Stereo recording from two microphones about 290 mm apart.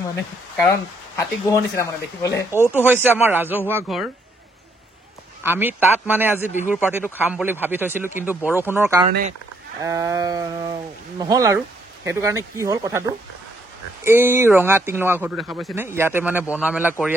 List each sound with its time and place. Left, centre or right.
0.7 s speech: centre
2.7 s speech: centre
5.4 s speech: centre
14.0 s speech: centre